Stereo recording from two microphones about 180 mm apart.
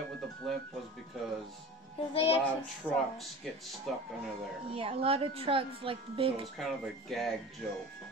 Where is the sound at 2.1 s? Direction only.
30° left (ahead or behind).